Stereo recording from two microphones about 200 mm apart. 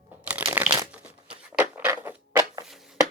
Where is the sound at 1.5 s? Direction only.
10° right (ahead or behind).